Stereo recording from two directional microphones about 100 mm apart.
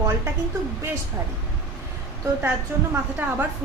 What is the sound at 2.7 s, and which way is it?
Speech, 25° right (ahead or behind).